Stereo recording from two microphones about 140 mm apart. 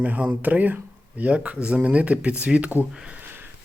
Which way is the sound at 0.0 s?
10° right (ahead or behind).